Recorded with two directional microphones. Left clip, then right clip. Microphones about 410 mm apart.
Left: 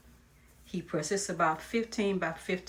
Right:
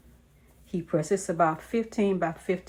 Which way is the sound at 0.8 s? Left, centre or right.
Centre.